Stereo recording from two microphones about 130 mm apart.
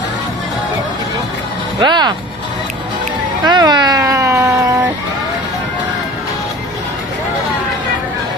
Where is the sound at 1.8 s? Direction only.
35° right (ahead or behind).